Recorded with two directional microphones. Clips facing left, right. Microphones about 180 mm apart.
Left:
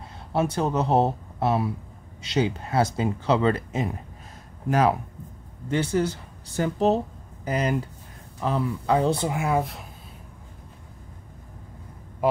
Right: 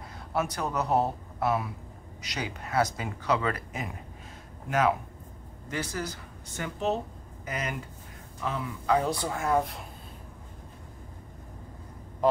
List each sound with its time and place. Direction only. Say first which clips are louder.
0.3 s speech: left 6 dB; 30° left (ahead or behind)
9.3 s speech: left 2 dB; 10° left (ahead or behind)